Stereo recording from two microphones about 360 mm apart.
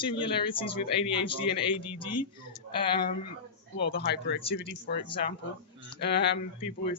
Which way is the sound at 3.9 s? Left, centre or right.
Left.